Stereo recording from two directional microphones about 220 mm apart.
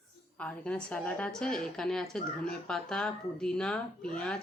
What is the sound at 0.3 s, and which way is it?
A woman's voice, 5° left (ahead or behind).